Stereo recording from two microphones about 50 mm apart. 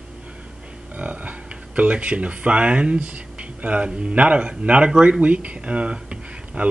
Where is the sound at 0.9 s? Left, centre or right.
Right.